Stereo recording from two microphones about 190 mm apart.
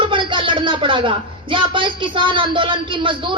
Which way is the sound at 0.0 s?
25° right (ahead or behind).